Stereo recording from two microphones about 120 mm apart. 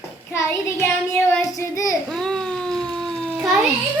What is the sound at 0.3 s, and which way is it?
Child singing, 20° left (ahead or behind).